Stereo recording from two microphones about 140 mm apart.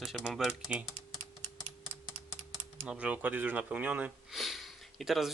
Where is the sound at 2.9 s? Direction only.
10° right (ahead or behind).